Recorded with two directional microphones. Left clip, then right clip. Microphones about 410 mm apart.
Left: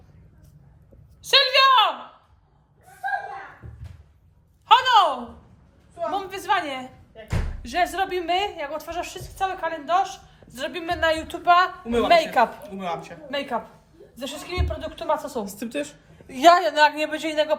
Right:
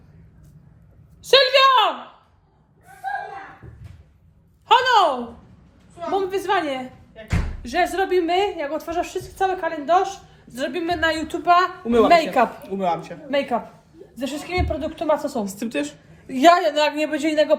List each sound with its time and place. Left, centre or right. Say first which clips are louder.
1.2 s a sound: right 3 dB; centre
4.6 s a sound: right 1 dB; centre
7.6 s a woman's voice: right 2 dB; centre
12.6 s a woman's voice: right 7 dB; centre
14.2 s a woman's voice: right 6 dB; centre
15.4 s a woman's voice: right 4 dB; centre
16.3 s a woman's voice: right 1 dB; centre